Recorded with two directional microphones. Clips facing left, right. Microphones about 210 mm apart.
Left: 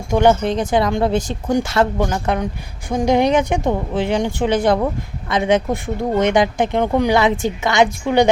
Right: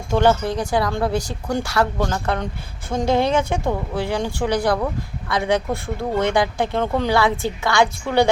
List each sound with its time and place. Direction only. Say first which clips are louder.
0.1 s speech: left 3 dB; 15° left (ahead or behind)